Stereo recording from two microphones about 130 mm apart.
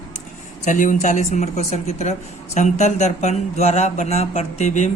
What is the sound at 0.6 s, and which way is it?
A man's voice, 80° left.